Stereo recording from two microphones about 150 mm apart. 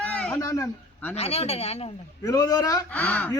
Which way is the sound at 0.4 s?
20° left (ahead or behind).